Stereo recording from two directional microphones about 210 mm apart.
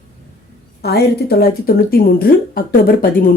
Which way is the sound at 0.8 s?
50° left (ahead or behind).